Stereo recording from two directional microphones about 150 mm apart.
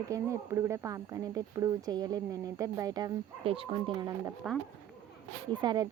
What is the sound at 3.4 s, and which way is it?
Speech, 40° right (ahead or behind).